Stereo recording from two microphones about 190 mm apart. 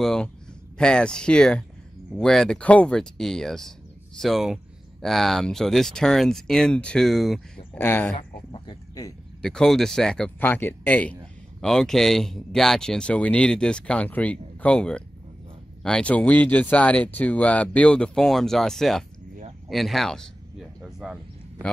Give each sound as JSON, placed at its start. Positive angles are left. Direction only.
{"t": 0.0, "sound": "speech", "side_deg": 5}
{"t": 7.8, "sound": "speech", "side_deg": 10}
{"t": 8.5, "sound": "speech", "side_deg": 25}
{"t": 9.4, "sound": "speech", "side_deg": 5}
{"t": 19.7, "sound": "a sound", "side_deg": 0}